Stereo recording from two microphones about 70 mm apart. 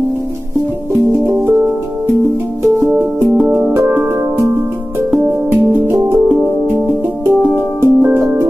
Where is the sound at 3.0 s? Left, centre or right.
Right.